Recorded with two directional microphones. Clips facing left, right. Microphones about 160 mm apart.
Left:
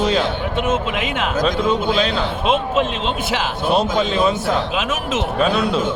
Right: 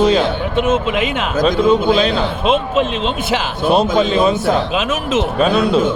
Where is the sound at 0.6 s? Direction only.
90° right.